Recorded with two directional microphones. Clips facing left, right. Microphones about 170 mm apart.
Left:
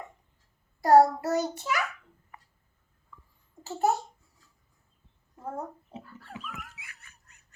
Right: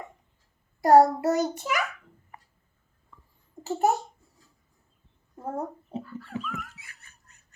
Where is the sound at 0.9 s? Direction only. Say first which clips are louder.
Right 2 dB; 15° right (ahead or behind).